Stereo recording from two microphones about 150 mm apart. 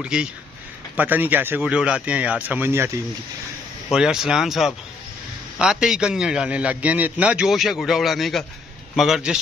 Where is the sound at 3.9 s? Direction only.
5° right (ahead or behind).